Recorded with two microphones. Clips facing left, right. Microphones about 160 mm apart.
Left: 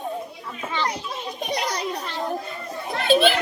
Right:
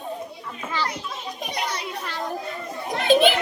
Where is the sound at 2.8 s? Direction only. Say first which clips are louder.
Right 1 dB; 15° right (ahead or behind).